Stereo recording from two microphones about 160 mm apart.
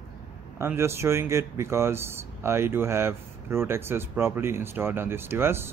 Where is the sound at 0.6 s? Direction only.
15° right (ahead or behind).